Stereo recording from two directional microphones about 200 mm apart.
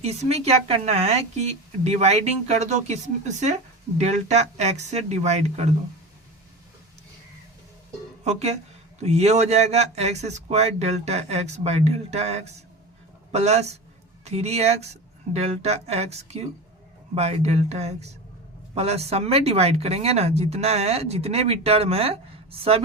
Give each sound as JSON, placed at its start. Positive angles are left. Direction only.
{"t": 0.0, "sound": "speech", "side_deg": -30}
{"t": 8.2, "sound": "speech", "side_deg": -35}